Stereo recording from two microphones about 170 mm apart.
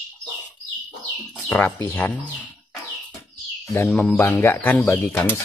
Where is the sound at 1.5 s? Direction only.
10° left (ahead or behind).